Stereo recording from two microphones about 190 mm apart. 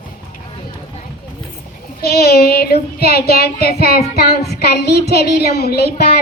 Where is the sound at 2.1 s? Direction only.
55° left (ahead or behind).